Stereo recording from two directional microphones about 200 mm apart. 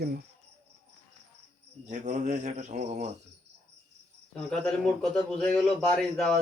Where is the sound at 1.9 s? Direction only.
40° right (ahead or behind).